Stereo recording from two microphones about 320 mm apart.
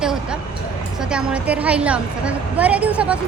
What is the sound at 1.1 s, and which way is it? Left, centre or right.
A woman's voice, centre.